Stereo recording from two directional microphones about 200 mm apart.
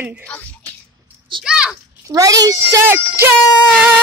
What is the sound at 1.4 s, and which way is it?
Speech, 5° right (ahead or behind).